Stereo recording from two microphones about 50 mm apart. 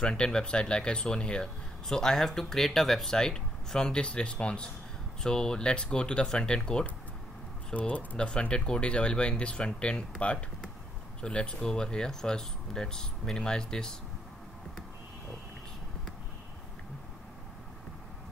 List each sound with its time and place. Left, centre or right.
0.0 s speech: centre
7.7 s speech: left
8.2 s speech: centre